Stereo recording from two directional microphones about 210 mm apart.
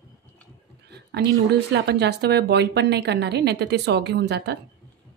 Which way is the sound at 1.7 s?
55° right (ahead or behind).